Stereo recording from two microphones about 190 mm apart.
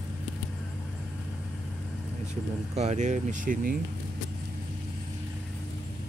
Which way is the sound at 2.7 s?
35° right (ahead or behind).